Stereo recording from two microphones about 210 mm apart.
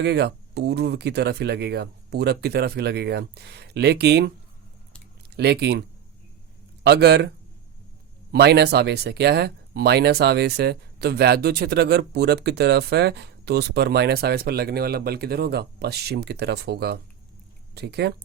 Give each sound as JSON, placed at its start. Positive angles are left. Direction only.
{"t": 0.0, "sound": "speech", "side_deg": -50}
{"t": 5.3, "sound": "speech", "side_deg": -50}
{"t": 6.8, "sound": "speech", "side_deg": -50}
{"t": 8.3, "sound": "speech", "side_deg": -50}